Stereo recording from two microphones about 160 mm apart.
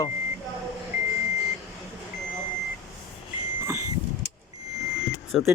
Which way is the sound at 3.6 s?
15° right (ahead or behind).